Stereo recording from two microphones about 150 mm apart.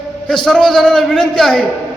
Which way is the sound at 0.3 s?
5° left (ahead or behind).